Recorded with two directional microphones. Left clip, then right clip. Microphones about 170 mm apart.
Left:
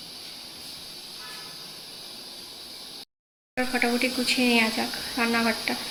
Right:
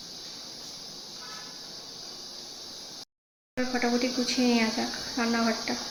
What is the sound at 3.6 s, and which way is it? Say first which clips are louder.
Speech: left 3 dB; centre (ahead or behind).